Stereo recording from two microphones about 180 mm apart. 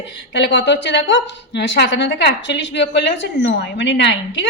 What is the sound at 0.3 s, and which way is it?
A woman's voice, 75° left (ahead or behind).